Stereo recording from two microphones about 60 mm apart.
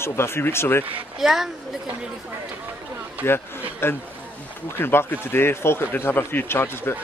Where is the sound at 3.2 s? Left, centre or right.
Left.